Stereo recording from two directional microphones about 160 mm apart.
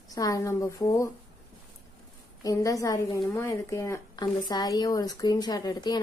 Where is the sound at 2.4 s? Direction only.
20° left (ahead or behind).